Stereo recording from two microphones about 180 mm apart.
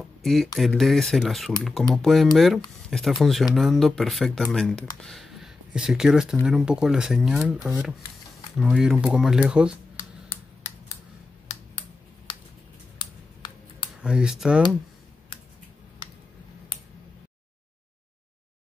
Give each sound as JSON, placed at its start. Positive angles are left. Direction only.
{"t": 0.2, "sound": "speech", "side_deg": 0}
{"t": 5.0, "sound": "a sound", "side_deg": 0}
{"t": 6.4, "sound": "speech", "side_deg": -5}
{"t": 11.5, "sound": "a sound", "side_deg": 40}
{"t": 13.0, "sound": "computer keyboard", "side_deg": 25}
{"t": 14.0, "sound": "speech", "side_deg": -5}